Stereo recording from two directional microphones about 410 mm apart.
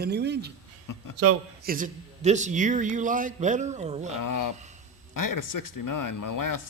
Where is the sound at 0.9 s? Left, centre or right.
Left.